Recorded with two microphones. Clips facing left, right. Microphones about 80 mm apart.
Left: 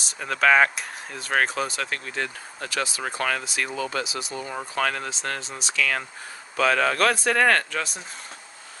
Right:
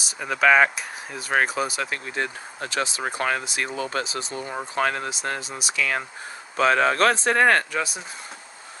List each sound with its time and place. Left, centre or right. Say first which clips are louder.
0.0 s speech: right 1 dB; centre
3.8 s speech: right 1 dB; right
5.1 s speech: right 2 dB; centre
6.6 s speech: right 2 dB; right
7.7 s speech: right 2 dB; centre